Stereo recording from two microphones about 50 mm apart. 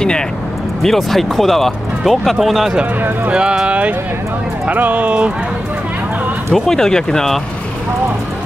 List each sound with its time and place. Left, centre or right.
0.8 s speech: centre
3.3 s speech: centre
6.5 s speech: centre